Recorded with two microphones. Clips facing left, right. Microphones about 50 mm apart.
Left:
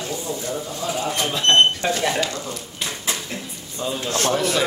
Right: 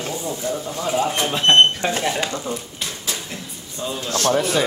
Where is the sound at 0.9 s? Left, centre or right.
Right.